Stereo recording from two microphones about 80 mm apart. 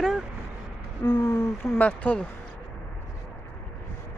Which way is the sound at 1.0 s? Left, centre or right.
Left.